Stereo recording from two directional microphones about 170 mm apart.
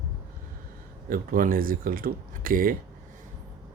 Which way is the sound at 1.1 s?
55° right (ahead or behind).